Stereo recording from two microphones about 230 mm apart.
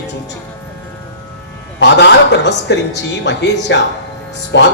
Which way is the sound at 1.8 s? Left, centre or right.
Left.